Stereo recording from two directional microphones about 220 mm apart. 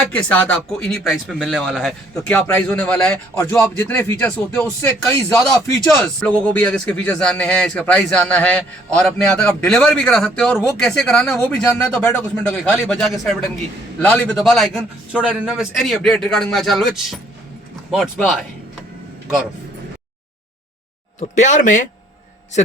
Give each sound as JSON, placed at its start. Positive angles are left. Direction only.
{"t": 0.1, "sound": "speech", "side_deg": 5}
{"t": 21.2, "sound": "speech", "side_deg": 35}